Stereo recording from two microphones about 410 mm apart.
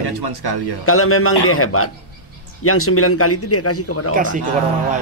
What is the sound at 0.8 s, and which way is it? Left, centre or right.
A man's voice, left.